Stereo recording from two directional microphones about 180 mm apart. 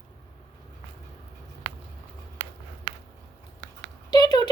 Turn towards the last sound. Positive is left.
turn(degrees=20)  # may be behind; listen again after turning